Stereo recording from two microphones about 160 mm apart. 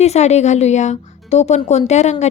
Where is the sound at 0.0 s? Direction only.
45° left (ahead or behind).